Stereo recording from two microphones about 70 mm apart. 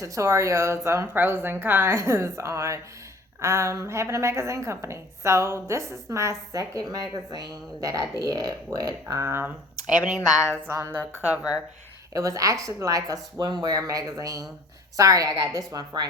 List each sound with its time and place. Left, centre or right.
0.0 s a woman's voice: right
8.2 s a woman's voice: right
9.2 s speech: right
10.7 s speech: right
12.1 s a woman's voice: right
13.4 s a woman's voice: right